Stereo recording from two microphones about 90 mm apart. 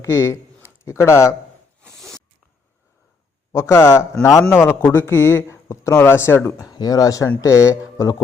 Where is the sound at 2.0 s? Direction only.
Centre (ahead or behind).